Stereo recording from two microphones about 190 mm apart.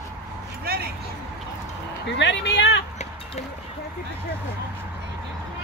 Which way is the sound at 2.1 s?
70° left (ahead or behind).